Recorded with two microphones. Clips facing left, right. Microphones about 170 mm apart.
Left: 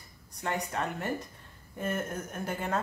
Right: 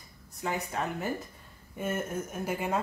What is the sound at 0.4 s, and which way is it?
Speech, centre (ahead or behind).